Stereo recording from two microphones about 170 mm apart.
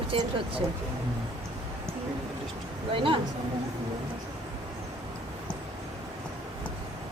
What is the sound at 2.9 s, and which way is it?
Speech, 30° right (ahead or behind).